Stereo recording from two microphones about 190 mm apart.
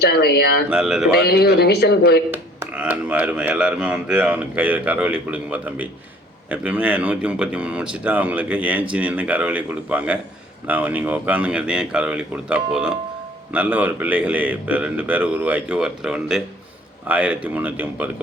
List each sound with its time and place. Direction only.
0.0 s a man's voice: 60° left (ahead or behind)
0.7 s speech: 5° right (ahead or behind)
1.1 s a man's voice: 60° left (ahead or behind)
2.3 s speech: 10° right (ahead or behind)